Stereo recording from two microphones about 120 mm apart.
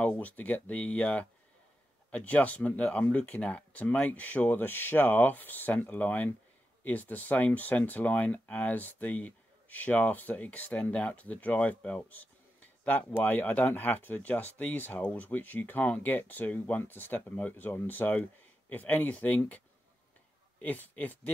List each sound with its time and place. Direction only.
0.0 s speech: 15° left (ahead or behind)
20.6 s speech: 15° left (ahead or behind)